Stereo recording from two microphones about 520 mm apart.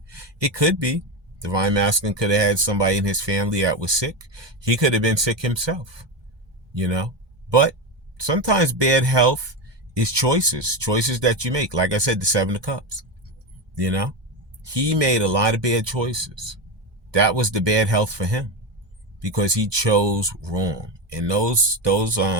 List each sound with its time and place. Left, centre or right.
0.1 s speech: right